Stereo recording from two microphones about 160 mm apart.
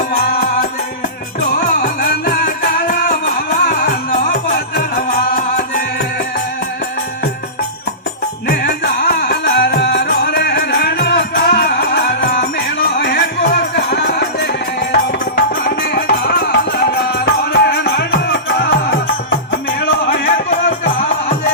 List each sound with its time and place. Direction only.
0.1 s music: 75° left (ahead or behind)
1.5 s music: 85° left
2.7 s music: 90° left
8.4 s music: 90° left
15.4 s music: 80° left; by 21.3 s 50° left (ahead or behind)